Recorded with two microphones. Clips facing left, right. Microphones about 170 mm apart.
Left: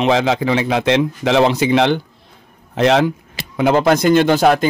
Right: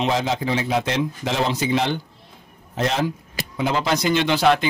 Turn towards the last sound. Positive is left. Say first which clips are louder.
# left 6 dB
turn(degrees=45)  # may be behind; listen again after turning